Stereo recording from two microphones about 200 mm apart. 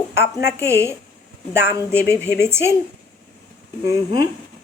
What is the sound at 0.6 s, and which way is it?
Speech, 15° right (ahead or behind).